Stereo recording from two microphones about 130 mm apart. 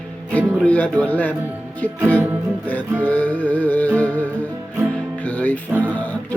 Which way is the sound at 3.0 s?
10° left (ahead or behind).